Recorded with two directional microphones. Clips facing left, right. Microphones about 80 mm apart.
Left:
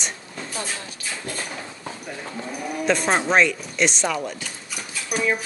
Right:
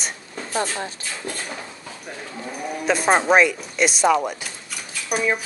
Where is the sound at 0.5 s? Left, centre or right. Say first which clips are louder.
Right 8 dB; right.